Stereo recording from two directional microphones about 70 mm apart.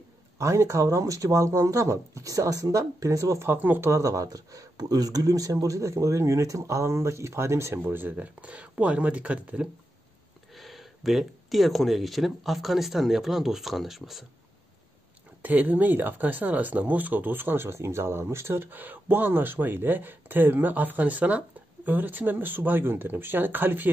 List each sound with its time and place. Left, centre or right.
0.4 s speech: right
3.4 s speech: right
3.8 s speech: right
7.8 s speech: right
10.5 s speech: centre
15.4 s speech: right